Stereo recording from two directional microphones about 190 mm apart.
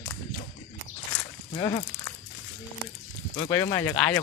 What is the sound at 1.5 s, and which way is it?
Speech, 20° left (ahead or behind).